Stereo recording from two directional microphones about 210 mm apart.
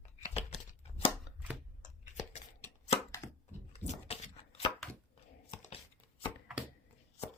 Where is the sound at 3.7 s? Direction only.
30° left (ahead or behind).